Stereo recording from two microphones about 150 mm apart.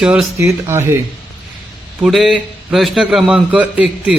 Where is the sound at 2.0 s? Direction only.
Centre (ahead or behind).